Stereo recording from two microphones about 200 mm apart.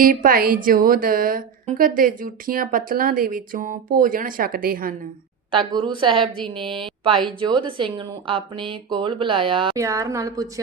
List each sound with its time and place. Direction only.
0.0 s a woman's voice: 45° right (ahead or behind)
5.5 s a woman's voice: 25° right (ahead or behind)
9.8 s speech: 15° right (ahead or behind)